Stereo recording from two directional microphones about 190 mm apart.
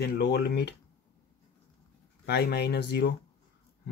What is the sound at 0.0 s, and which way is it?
Speech, 55° left (ahead or behind).